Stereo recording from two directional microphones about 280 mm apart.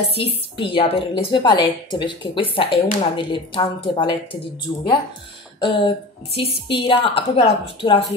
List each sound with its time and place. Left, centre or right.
0.6 s a woman's voice: centre